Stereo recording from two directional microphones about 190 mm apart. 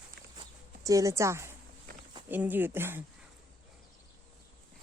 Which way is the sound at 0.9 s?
15° right (ahead or behind).